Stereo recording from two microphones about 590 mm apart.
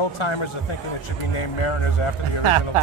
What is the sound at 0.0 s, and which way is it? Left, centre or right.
A man's voice, left.